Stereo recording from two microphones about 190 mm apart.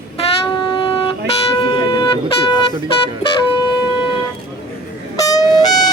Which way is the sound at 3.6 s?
25° left (ahead or behind).